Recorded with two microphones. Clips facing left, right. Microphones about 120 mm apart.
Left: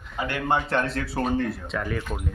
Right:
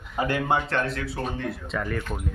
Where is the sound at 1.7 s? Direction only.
Centre (ahead or behind).